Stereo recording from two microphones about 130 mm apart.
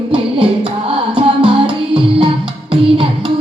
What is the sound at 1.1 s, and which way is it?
Music, 40° right (ahead or behind).